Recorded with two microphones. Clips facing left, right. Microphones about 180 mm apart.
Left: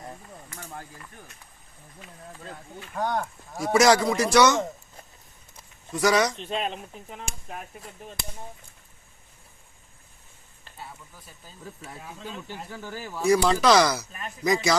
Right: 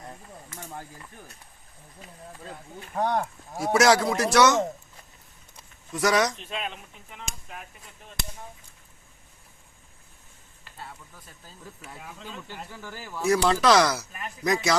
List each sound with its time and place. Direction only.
2.8 s speech: 25° right (ahead or behind)
3.6 s speech: centre (ahead or behind)
5.9 s speech: centre (ahead or behind)
6.4 s speech: 35° left (ahead or behind)
12.5 s speech: 20° left (ahead or behind)
13.2 s speech: centre (ahead or behind)
14.1 s speech: 25° left (ahead or behind)
14.4 s speech: centre (ahead or behind)